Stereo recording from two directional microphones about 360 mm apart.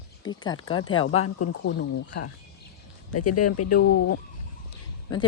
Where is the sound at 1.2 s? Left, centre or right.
Left.